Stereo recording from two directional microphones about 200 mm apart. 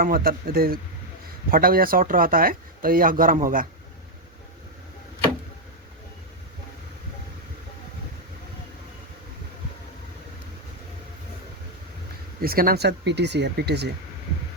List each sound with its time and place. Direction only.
0.0 s speech: 45° right (ahead or behind)
12.4 s speech: 50° right (ahead or behind)